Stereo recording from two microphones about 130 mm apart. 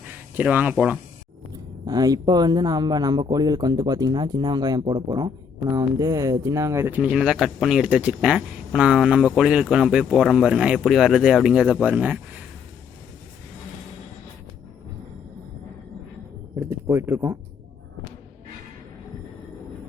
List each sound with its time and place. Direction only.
0.3 s speech: 10° right (ahead or behind)
1.9 s speech: 30° right (ahead or behind); by 12.2 s 10° right (ahead or behind)
16.8 s speech: 20° right (ahead or behind)